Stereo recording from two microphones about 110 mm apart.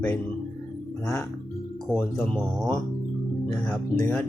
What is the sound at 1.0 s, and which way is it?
Speech, 25° left (ahead or behind).